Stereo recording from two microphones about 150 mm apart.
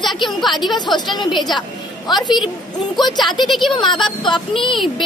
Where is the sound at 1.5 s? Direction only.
30° left (ahead or behind).